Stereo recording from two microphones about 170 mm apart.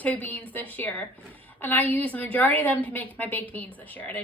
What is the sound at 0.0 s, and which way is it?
A woman's voice, 10° left (ahead or behind).